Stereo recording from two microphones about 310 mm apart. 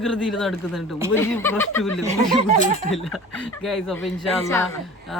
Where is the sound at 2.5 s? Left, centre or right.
Right.